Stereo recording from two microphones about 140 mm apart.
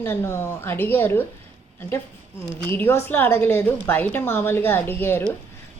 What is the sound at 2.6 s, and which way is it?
A woman's voice, 15° left (ahead or behind).